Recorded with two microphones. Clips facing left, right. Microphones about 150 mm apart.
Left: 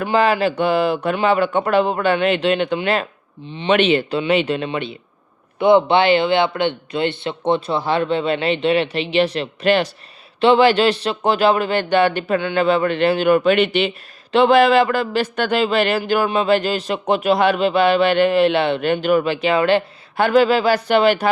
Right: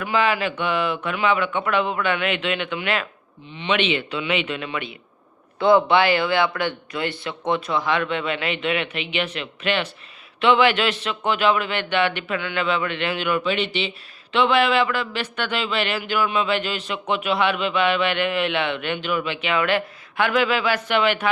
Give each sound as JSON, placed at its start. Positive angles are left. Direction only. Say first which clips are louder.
{"t": 0.0, "sound": "speech", "louder": "left 5 dB", "side_deg": 35}
{"t": 14.3, "sound": "speech", "louder": "left 6 dB", "side_deg": 40}